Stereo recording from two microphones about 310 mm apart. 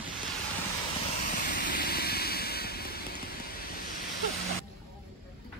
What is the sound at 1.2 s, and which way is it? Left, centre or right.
Vehicle, left.